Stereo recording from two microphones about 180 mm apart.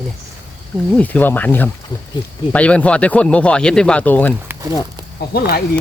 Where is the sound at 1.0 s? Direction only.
10° left (ahead or behind).